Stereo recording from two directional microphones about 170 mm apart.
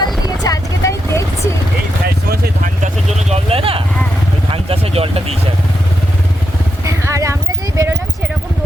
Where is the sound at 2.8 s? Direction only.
40° right (ahead or behind).